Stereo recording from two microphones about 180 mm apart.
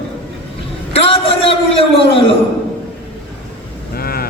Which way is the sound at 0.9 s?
30° left (ahead or behind).